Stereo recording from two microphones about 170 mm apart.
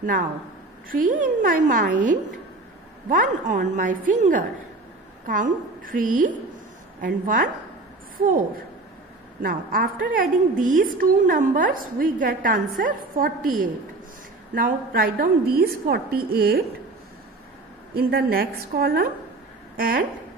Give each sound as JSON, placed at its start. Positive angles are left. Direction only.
{"t": 0.8, "sound": "a woman's voice", "side_deg": -55}
{"t": 9.4, "sound": "a woman's voice", "side_deg": -55}
{"t": 17.9, "sound": "a woman's voice", "side_deg": -65}